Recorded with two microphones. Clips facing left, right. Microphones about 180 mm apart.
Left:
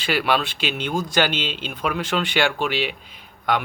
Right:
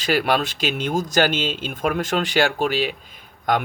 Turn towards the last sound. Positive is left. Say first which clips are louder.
# right 1 dB
turn(degrees=-45)  # may be behind; listen again after turning